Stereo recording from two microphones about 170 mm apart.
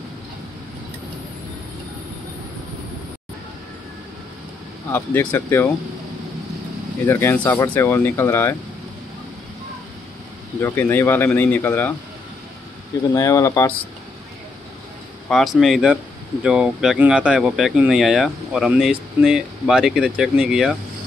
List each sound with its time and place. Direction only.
4.9 s speech: 10° left (ahead or behind)
7.1 s speech: 15° left (ahead or behind)
10.6 s speech: 10° left (ahead or behind)
13.1 s speech: 20° left (ahead or behind)
15.2 s speech: centre (ahead or behind)